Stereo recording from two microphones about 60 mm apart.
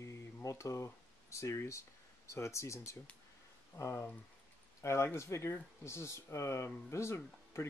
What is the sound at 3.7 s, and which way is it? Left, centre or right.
Speech, left.